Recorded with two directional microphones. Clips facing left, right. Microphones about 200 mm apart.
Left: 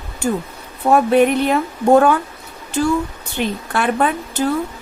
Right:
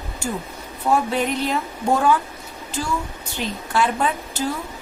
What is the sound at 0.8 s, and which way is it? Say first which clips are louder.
Speech: left 8 dB; 60° left (ahead or behind).